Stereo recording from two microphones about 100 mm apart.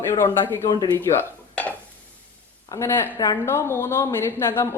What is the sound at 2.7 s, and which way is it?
A woman's voice, 25° left (ahead or behind).